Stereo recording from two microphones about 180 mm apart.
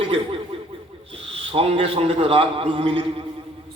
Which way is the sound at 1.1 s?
30° right (ahead or behind).